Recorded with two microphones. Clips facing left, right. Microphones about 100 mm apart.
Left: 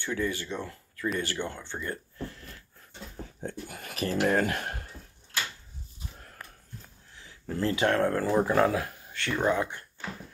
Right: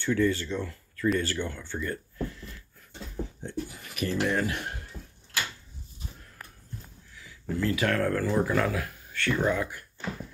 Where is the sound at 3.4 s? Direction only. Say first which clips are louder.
Right 2 dB; 50° left (ahead or behind).